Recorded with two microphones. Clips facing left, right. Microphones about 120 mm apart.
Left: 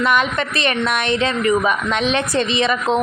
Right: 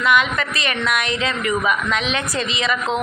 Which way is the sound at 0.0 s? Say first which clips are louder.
Left 1 dB; 35° left (ahead or behind).